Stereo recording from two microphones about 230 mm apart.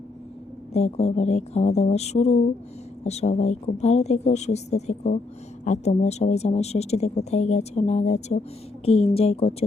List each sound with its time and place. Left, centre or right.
0.7 s speech: left